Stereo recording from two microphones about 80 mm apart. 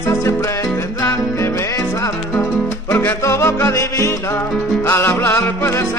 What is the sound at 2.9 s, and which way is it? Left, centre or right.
Music, left.